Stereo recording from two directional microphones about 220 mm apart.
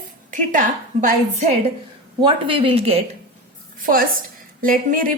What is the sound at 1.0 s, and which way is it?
A woman's voice, 30° right (ahead or behind).